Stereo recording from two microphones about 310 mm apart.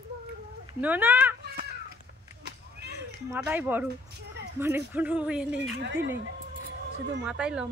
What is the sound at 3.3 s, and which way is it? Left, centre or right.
Speech, centre.